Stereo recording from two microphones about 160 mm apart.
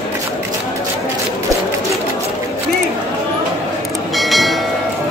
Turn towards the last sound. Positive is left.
turn(degrees=0)  # may be behind; listen again after turning